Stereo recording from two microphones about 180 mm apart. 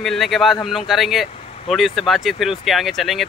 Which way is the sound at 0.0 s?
Centre (ahead or behind).